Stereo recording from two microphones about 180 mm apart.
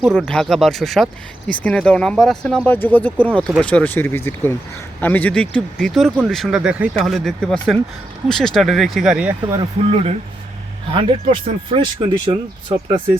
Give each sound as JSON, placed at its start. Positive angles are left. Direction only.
{"t": 0.0, "sound": "speech", "side_deg": 5}
{"t": 9.6, "sound": "speech", "side_deg": -35}